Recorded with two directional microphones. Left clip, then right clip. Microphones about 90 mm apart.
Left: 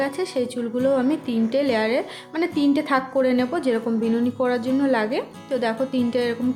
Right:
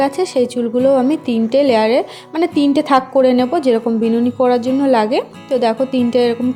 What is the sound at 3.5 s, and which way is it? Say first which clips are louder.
A woman's voice: right 8 dB; 65° right (ahead or behind).